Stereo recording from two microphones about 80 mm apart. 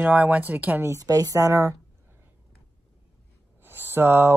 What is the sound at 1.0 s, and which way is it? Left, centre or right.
Speech, right.